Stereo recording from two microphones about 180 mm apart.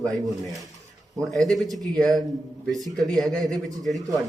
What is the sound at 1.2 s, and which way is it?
Speech, centre (ahead or behind).